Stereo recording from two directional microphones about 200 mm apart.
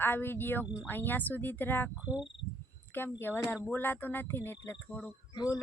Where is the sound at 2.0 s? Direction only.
5° right (ahead or behind).